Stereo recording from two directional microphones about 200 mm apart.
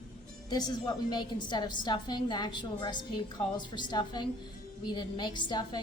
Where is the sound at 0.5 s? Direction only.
20° left (ahead or behind).